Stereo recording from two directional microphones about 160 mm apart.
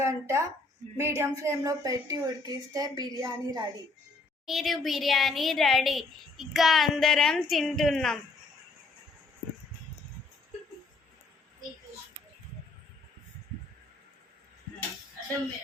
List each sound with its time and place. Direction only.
0.0 s a woman's voice: 20° right (ahead or behind)
4.4 s speech: centre (ahead or behind)